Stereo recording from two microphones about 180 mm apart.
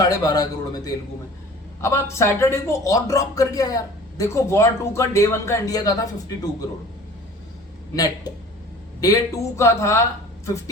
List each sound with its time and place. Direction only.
0.0 s speech: 20° left (ahead or behind)
7.9 s speech: 20° left (ahead or behind)